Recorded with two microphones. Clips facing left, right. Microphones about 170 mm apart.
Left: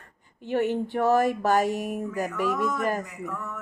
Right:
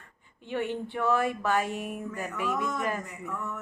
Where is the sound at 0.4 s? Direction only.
40° left (ahead or behind).